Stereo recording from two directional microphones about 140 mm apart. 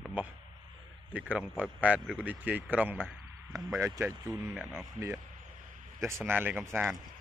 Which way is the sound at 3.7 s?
20° right (ahead or behind).